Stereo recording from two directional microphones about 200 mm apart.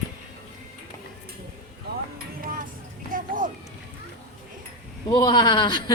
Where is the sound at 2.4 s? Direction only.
45° right (ahead or behind).